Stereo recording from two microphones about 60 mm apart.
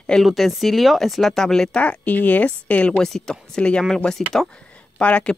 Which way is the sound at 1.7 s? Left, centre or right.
Left.